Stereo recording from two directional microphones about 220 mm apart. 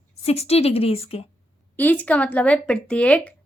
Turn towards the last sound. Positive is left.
turn(degrees=5)  # may be behind; listen again after turning